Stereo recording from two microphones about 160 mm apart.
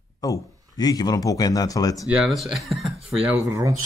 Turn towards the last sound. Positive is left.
turn(degrees=-20)  # may be behind; listen again after turning